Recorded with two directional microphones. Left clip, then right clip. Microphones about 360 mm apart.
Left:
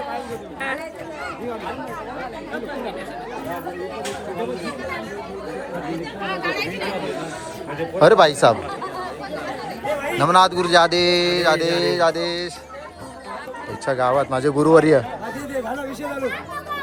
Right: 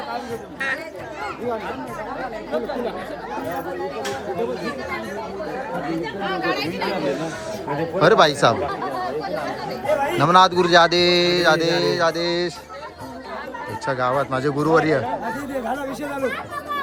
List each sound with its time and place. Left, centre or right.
6.4 s speech: right
7.9 s a man's voice: centre
10.2 s a sound: centre
13.8 s a man's voice: centre